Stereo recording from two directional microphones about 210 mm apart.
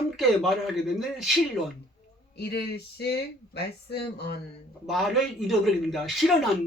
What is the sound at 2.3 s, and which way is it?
Speech, 50° left (ahead or behind).